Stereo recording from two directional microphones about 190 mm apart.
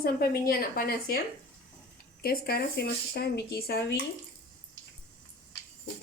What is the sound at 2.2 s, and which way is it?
Speech, 50° left (ahead or behind).